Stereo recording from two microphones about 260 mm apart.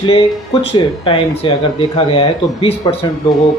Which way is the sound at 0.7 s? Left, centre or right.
Centre.